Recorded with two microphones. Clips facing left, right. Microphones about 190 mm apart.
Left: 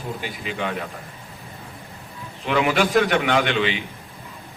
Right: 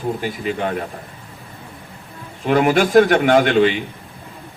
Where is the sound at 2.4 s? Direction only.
45° right (ahead or behind).